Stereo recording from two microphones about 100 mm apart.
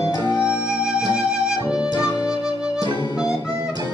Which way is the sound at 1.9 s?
40° left (ahead or behind).